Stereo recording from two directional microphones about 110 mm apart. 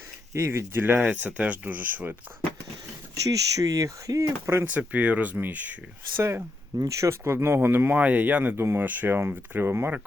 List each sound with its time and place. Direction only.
0.3 s speech: 25° right (ahead or behind)
3.2 s speech: 30° right (ahead or behind)
4.8 s speech: 15° right (ahead or behind)